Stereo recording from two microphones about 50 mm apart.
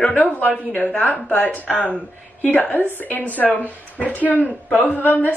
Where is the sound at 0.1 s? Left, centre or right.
Left.